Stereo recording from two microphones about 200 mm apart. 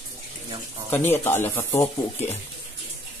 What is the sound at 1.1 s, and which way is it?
Speech, 10° left (ahead or behind).